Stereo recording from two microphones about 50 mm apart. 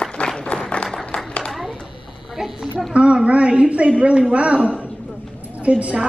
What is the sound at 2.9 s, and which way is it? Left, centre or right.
A woman's voice, right.